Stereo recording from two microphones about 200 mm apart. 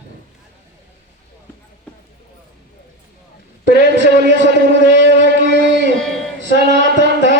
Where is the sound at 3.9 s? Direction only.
60° right (ahead or behind).